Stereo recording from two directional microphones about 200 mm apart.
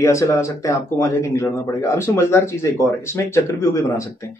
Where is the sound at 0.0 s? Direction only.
15° left (ahead or behind).